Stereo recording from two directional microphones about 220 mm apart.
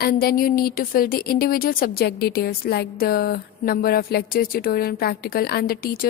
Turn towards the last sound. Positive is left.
turn(degrees=40)  # may be behind; listen again after turning